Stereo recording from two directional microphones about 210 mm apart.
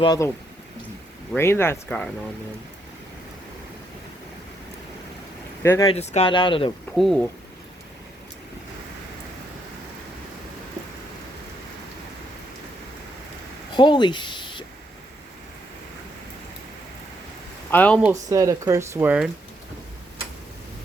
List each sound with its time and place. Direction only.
0.0 s speech: 20° left (ahead or behind)
1.4 s speech: 10° left (ahead or behind)
5.6 s speech: 15° left (ahead or behind)
5.9 s speech: 30° left (ahead or behind)
6.9 s speech: centre (ahead or behind)
13.7 s speech: 20° left (ahead or behind)
17.7 s speech: 5° left (ahead or behind)
18.1 s speech: 15° right (ahead or behind)